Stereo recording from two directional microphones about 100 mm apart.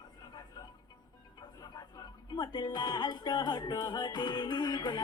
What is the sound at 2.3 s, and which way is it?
Music, 50° left (ahead or behind).